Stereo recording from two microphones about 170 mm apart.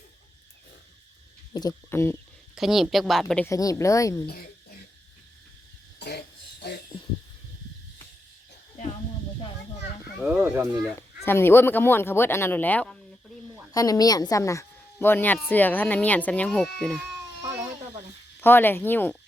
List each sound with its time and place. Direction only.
1.5 s speech: 20° left (ahead or behind)
2.6 s a woman's voice: centre (ahead or behind)
3.4 s a woman's voice: 20° left (ahead or behind)
6.0 s a sound: 70° left (ahead or behind)
10.2 s speech: 5° right (ahead or behind)
11.3 s speech: 15° left (ahead or behind)
13.7 s a woman's voice: 20° left (ahead or behind); by 17.0 s 5° left (ahead or behind)
17.4 s goat: 15° right (ahead or behind)
18.3 s speech: 10° left (ahead or behind)